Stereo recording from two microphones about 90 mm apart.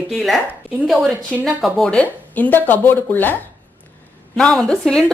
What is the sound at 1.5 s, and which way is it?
Speech, centre (ahead or behind).